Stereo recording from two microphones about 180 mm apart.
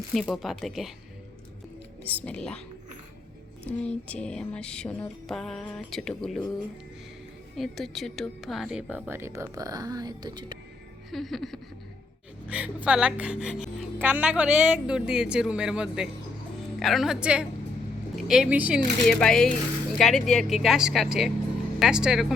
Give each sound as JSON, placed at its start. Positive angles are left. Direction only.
{"t": 0.1, "sound": "speech", "side_deg": 0}
{"t": 2.0, "sound": "speech", "side_deg": 5}
{"t": 3.7, "sound": "speech", "side_deg": 5}
{"t": 7.5, "sound": "a woman's voice", "side_deg": 0}
{"t": 11.1, "sound": "speech", "side_deg": 0}
{"t": 19.0, "sound": "speech", "side_deg": 5}